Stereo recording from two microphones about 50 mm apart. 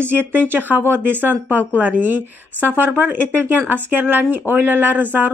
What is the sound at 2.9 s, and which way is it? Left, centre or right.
Speech, right.